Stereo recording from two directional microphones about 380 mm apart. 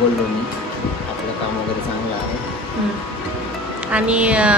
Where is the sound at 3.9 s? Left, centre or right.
Centre.